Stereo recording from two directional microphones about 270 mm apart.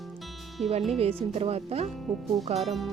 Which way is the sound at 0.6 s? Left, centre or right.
Right.